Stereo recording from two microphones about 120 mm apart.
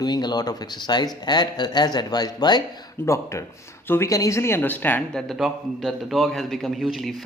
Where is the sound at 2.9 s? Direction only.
25° left (ahead or behind).